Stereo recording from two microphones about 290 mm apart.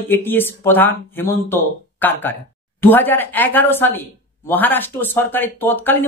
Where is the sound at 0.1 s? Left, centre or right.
Centre.